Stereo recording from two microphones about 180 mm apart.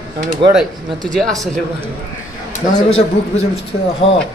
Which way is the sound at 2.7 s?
35° left (ahead or behind).